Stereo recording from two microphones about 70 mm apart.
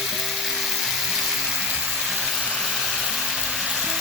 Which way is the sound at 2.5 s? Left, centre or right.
Centre.